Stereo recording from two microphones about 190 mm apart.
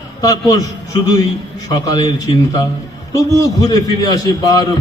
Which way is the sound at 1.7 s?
20° left (ahead or behind).